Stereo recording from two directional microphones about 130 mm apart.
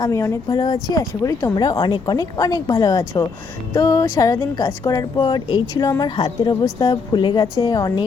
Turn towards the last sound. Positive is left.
turn(degrees=30)  # may be behind; listen again after turning